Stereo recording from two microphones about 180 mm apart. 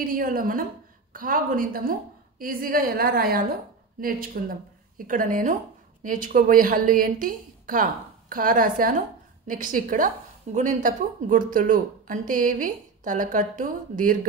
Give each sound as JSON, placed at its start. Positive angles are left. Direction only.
{"t": 0.0, "sound": "a woman's voice", "side_deg": -50}